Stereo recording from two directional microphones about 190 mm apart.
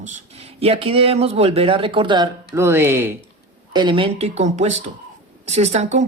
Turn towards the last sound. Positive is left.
turn(degrees=-35)  # may be behind; listen again after turning